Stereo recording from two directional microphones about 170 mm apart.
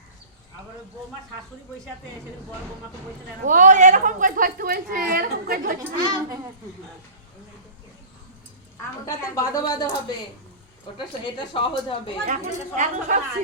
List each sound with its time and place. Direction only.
3.4 s a woman's voice: 50° right (ahead or behind)
6.0 s speech: 25° right (ahead or behind)
8.8 s a woman's voice: 20° left (ahead or behind)
12.2 s speech: 45° right (ahead or behind)